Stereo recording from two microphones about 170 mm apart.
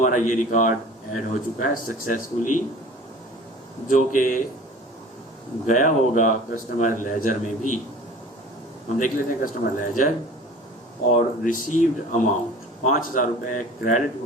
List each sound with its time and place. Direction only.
0.0 s speech: 50° left (ahead or behind)
3.8 s speech: 50° left (ahead or behind)
5.6 s speech: 50° left (ahead or behind)
9.0 s speech: 50° left (ahead or behind)
11.1 s speech: 50° left (ahead or behind)